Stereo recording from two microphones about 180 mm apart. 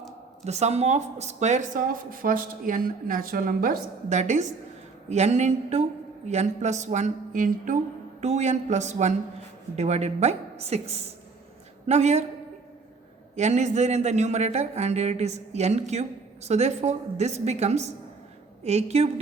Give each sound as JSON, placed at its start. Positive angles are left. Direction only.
{"t": 0.4, "sound": "a man's voice", "side_deg": -40}
{"t": 13.3, "sound": "a man's voice", "side_deg": -40}